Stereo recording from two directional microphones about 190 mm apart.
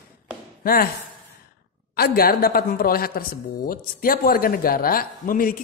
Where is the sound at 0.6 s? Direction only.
50° left (ahead or behind).